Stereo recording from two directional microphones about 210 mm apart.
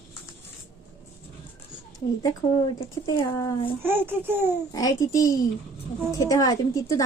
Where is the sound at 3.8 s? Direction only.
10° right (ahead or behind).